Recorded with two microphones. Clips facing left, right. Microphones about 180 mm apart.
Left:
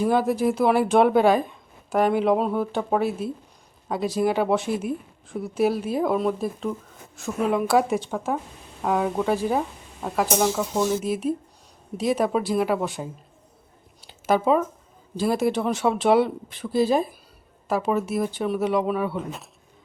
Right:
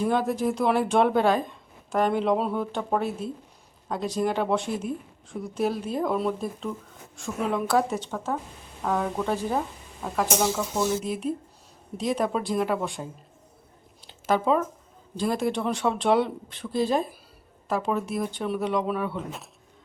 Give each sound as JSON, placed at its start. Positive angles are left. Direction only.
{"t": 0.0, "sound": "speech", "side_deg": 5}
{"t": 14.0, "sound": "a sound", "side_deg": 10}
{"t": 15.1, "sound": "speech", "side_deg": 5}